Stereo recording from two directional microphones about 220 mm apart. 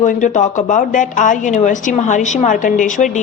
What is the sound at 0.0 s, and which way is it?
A woman's voice, 35° left (ahead or behind).